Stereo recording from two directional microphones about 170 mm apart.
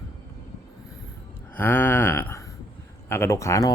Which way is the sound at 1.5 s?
10° left (ahead or behind).